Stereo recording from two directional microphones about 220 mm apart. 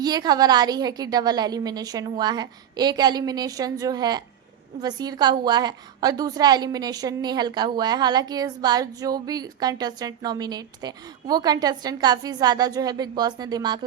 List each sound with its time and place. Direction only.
0.0 s a woman's voice: 20° right (ahead or behind)